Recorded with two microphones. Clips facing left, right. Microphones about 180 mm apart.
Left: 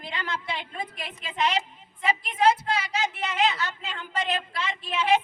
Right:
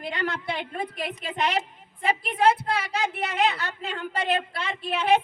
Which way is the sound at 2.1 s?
60° right (ahead or behind).